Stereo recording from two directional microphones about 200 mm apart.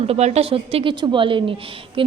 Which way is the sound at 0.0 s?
30° right (ahead or behind).